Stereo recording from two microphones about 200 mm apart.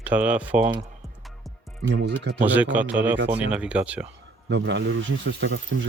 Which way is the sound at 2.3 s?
10° right (ahead or behind).